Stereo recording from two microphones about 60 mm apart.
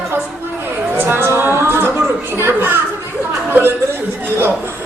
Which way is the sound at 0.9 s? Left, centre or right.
Right.